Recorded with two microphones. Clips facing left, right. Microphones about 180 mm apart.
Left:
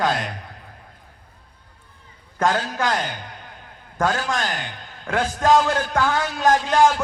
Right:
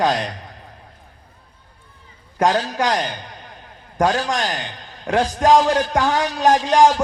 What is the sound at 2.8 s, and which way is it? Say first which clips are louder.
A man's voice: right 3 dB; 15° right (ahead or behind).